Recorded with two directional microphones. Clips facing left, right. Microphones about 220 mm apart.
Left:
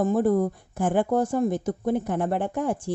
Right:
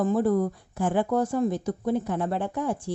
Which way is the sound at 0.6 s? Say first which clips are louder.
Left 2 dB; 50° left (ahead or behind).